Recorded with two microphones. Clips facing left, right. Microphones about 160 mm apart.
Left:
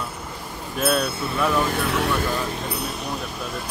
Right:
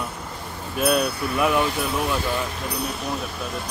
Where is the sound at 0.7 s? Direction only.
Centre (ahead or behind).